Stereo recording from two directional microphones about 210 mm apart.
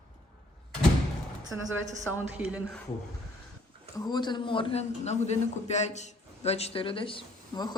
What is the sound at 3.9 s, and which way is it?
A man's voice, 20° left (ahead or behind).